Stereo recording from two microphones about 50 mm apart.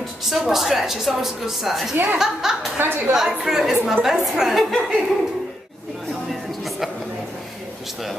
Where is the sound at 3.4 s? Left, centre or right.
Centre.